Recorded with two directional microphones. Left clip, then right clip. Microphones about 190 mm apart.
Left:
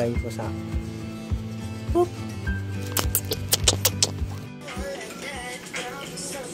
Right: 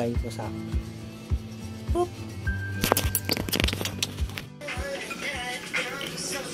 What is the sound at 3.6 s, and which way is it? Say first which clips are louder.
Music: left 6 dB; 45° left (ahead or behind).